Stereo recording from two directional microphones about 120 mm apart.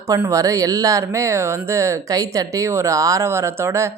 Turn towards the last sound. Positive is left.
turn(degrees=-20)  # may be behind; listen again after turning